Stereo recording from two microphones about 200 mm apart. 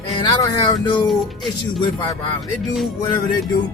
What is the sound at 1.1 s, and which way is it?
Speech, centre (ahead or behind).